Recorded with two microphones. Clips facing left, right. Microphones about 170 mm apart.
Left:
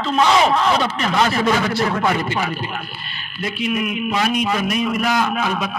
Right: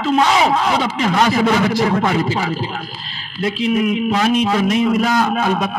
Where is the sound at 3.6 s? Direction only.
30° right (ahead or behind).